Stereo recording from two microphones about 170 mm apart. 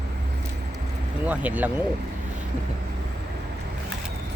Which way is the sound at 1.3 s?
10° right (ahead or behind).